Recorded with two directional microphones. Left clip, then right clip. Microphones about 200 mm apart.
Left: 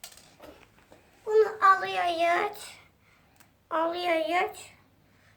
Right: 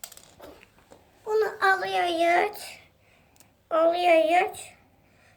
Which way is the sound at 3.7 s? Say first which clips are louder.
Right 7 dB; 10° left (ahead or behind).